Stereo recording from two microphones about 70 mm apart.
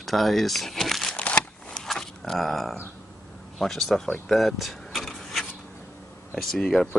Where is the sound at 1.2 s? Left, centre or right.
Centre.